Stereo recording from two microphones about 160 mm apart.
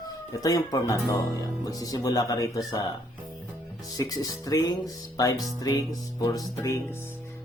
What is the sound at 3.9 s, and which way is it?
Speech, 20° left (ahead or behind).